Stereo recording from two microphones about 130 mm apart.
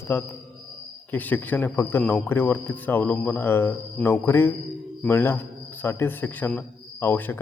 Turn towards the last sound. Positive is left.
turn(degrees=15)  # may be behind; listen again after turning